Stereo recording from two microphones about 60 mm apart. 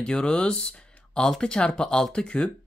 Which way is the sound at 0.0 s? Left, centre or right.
Centre.